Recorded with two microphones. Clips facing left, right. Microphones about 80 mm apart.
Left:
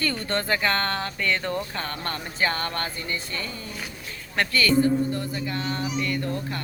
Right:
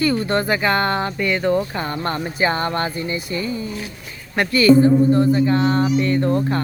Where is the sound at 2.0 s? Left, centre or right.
Right.